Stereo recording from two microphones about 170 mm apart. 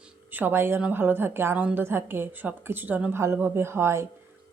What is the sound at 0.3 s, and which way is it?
A woman's voice, 10° right (ahead or behind).